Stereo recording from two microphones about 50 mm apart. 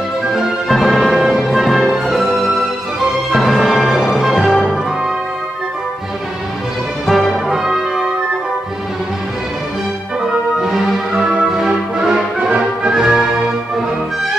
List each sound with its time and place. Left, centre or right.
0.3 s music: centre
7.1 s music: centre
7.4 s music: centre
10.6 s music: centre